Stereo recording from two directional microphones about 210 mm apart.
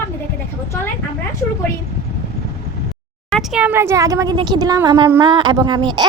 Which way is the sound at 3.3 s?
5° right (ahead or behind).